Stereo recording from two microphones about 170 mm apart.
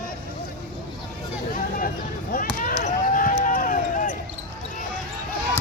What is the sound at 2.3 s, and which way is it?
Basketball bounce, 55° left (ahead or behind).